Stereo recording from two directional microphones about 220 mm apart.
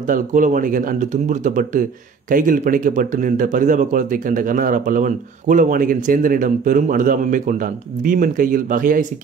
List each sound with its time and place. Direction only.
0.1 s speech: 35° right (ahead or behind)